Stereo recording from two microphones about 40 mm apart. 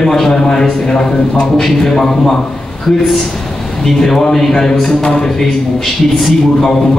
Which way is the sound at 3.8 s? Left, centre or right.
Centre.